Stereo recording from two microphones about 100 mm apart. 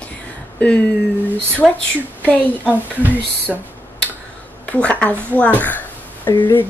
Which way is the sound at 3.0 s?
20° right (ahead or behind).